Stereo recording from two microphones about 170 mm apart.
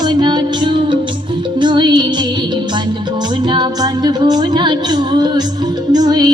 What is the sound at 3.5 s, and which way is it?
Music, 25° right (ahead or behind).